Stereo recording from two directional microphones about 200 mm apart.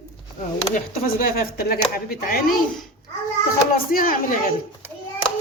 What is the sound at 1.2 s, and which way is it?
Speech, 50° left (ahead or behind).